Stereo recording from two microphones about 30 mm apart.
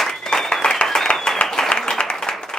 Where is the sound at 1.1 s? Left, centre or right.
Left.